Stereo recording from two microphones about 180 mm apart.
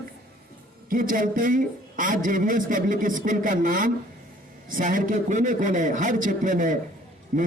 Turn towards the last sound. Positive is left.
turn(degrees=-45)  # may be behind; listen again after turning